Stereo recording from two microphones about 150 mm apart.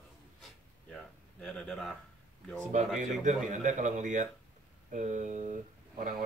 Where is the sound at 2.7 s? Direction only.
55° right (ahead or behind).